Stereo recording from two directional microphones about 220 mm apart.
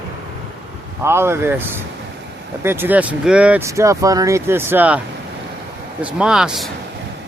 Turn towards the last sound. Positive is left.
turn(degrees=0)  # may be behind; listen again after turning